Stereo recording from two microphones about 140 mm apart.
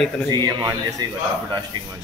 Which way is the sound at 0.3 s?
30° right (ahead or behind).